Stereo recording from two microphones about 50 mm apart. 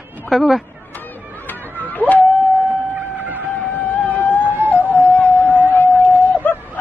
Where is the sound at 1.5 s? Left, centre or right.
Left.